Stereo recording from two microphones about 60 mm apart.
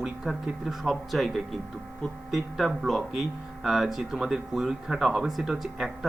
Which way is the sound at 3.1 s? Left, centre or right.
Centre.